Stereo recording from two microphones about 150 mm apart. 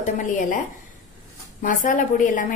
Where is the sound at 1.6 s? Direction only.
65° left (ahead or behind).